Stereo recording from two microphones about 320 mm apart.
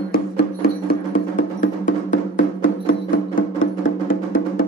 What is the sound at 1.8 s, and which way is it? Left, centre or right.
Music, left.